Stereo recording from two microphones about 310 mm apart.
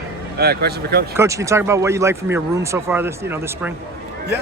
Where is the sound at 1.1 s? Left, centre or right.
Centre.